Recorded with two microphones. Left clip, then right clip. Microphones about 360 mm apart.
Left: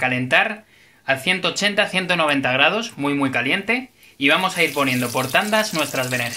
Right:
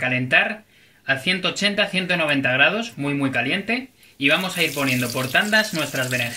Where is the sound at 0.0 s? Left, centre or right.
Centre.